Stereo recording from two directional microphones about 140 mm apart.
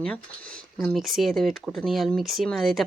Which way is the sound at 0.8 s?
Centre (ahead or behind).